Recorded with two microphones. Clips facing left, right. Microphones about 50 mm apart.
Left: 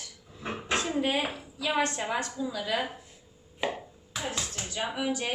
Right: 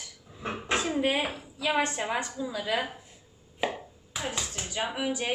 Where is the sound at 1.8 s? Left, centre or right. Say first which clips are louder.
Left 2 dB; centre.